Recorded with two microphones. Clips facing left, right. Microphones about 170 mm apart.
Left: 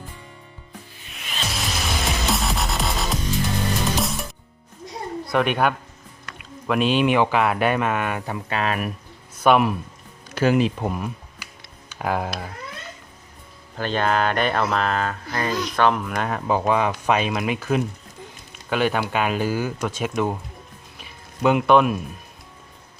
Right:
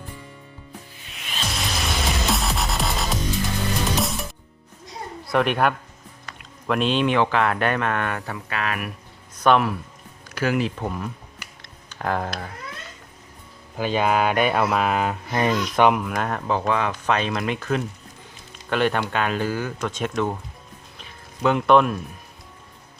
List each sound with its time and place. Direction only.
1.5 s music: centre (ahead or behind)
5.3 s speech: centre (ahead or behind)
8.4 s speech: 25° left (ahead or behind)
9.4 s speech: 10° left (ahead or behind)
10.2 s speech: 25° left (ahead or behind)
11.6 s a sound: 10° left (ahead or behind)
13.7 s speech: 10° right (ahead or behind)
16.0 s speech: centre (ahead or behind)
16.5 s speech: 10° left (ahead or behind)
21.0 s a sound: 10° left (ahead or behind)